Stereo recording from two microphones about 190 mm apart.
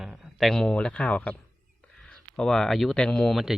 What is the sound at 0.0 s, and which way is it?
A man's voice, centre (ahead or behind).